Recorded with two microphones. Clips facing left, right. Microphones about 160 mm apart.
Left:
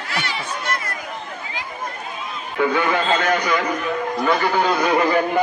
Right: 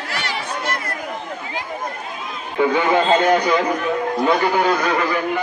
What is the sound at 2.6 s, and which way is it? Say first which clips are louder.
A man's voice: right 3 dB; 20° right (ahead or behind).